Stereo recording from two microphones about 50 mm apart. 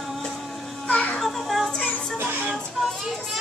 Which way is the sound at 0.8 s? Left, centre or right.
Left.